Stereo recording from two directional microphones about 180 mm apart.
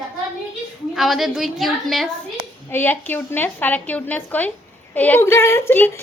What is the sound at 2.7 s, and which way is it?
A woman's voice, 10° left (ahead or behind).